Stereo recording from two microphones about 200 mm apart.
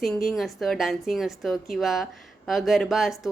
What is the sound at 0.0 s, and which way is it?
Speech, centre (ahead or behind).